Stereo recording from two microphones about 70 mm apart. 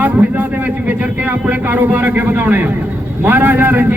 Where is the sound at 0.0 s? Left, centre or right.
Right.